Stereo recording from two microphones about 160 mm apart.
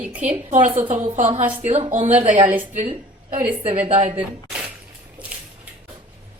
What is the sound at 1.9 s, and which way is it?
A woman's voice, 45° right (ahead or behind).